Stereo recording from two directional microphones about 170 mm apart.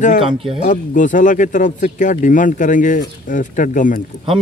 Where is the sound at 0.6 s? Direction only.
50° left (ahead or behind).